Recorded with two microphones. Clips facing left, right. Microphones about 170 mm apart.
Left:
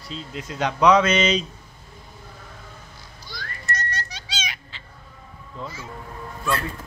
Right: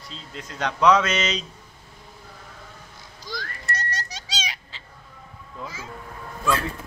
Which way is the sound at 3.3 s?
90° right.